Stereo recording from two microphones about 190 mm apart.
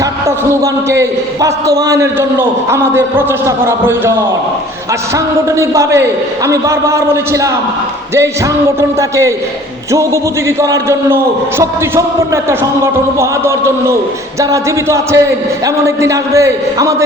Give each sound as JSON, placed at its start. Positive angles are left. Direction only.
{"t": 0.0, "sound": "speech", "side_deg": -15}
{"t": 8.8, "sound": "speech", "side_deg": -15}